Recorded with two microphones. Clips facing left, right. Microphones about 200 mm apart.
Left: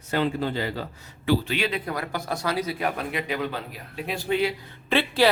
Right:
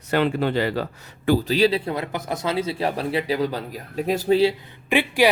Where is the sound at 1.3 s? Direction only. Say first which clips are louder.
Right 6 dB; 40° right (ahead or behind).